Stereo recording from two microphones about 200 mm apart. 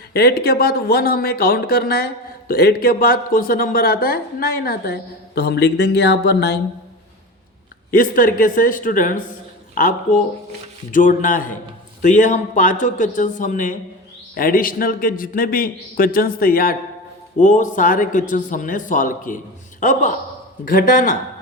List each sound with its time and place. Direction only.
0.1 s speech: 50° left (ahead or behind)
7.9 s a man's voice: 45° left (ahead or behind)